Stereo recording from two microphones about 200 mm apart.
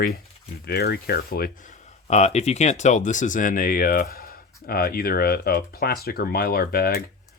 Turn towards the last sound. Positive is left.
turn(degrees=50)  # may be behind; listen again after turning